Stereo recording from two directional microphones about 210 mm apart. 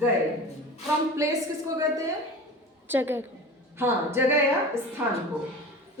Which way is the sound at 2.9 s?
10° right (ahead or behind).